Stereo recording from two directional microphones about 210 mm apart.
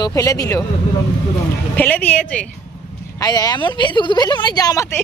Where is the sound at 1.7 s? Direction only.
10° left (ahead or behind).